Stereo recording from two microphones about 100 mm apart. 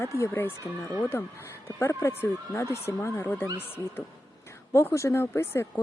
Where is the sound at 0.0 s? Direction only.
25° left (ahead or behind).